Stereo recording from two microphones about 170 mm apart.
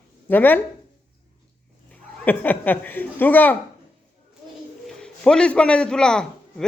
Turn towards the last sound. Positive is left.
turn(degrees=5)  # may be behind; listen again after turning